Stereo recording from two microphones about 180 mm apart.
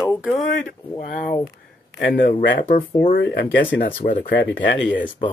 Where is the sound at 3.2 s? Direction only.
75° left (ahead or behind).